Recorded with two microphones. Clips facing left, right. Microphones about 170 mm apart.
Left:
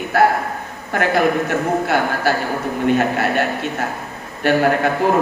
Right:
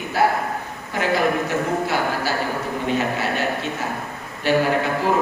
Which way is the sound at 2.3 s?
55° left (ahead or behind).